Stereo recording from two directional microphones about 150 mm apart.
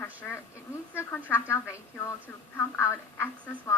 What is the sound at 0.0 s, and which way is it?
A woman's voice, 15° left (ahead or behind).